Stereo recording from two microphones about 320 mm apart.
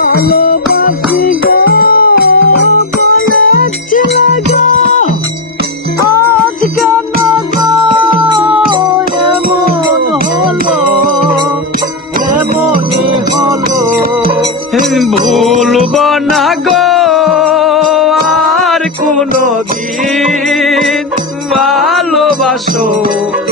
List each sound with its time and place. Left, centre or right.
0.1 s music: left
6.7 s music: centre
14.2 s music: right
14.8 s music: centre
19.0 s music: right
20.1 s music: centre
21.5 s a sound: centre